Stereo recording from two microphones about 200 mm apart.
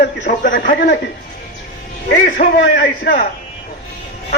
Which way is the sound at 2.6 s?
60° left (ahead or behind).